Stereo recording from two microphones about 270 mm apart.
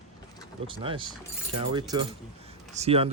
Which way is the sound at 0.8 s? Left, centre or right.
Centre.